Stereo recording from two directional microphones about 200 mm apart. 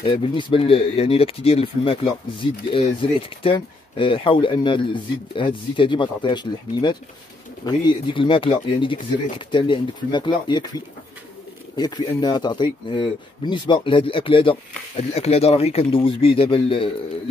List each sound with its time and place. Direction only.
0.0 s speech: 25° left (ahead or behind)
11.7 s speech: 20° left (ahead or behind)